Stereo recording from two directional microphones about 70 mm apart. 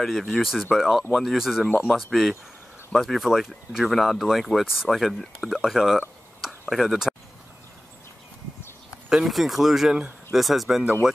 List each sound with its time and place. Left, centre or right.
0.0 s speech: centre
5.7 s a sound: centre
6.7 s speech: centre
9.1 s speech: centre